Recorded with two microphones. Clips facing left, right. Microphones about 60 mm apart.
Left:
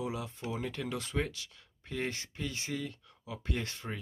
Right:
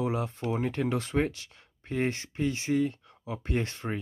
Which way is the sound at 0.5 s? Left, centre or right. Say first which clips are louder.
Right 8 dB; right.